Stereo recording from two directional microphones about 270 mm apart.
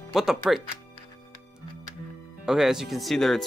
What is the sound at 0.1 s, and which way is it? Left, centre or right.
Speech, centre.